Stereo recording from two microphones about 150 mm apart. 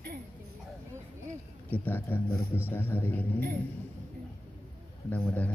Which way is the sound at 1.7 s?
15° left (ahead or behind).